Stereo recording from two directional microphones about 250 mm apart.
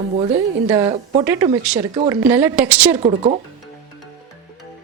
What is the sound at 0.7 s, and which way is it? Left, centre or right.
Speech, centre.